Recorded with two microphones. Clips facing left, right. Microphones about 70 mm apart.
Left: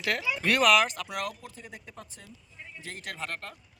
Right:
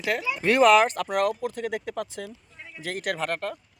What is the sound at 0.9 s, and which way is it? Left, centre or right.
Speech, right.